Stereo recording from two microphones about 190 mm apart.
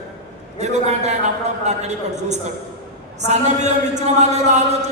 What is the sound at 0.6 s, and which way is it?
A man's voice, 35° right (ahead or behind).